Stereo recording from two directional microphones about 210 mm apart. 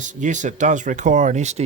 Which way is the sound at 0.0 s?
35° right (ahead or behind).